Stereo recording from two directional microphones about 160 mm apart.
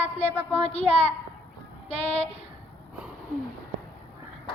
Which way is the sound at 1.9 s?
40° left (ahead or behind).